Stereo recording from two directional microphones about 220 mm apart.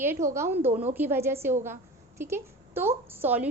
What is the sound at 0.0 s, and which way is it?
A woman's voice, 10° right (ahead or behind).